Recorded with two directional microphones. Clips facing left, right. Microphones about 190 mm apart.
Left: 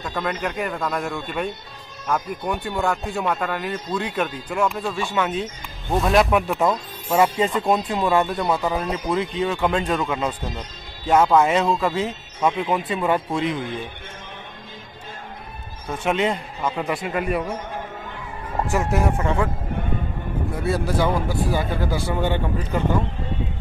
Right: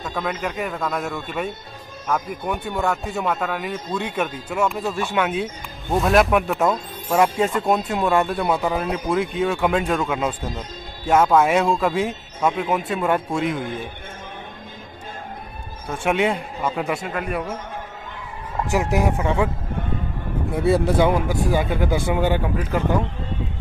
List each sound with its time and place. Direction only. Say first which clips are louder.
0.0 s speech: even; centre (ahead or behind)
16.1 s speech: right 1 dB; 10° right (ahead or behind)
18.7 s speech: right 2 dB; 15° right (ahead or behind)
20.5 s speech: right 5 dB; 25° right (ahead or behind); by 22.8 s 10° right (ahead or behind)